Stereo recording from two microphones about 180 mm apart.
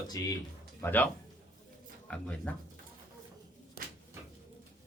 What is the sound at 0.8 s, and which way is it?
Speech, 10° left (ahead or behind).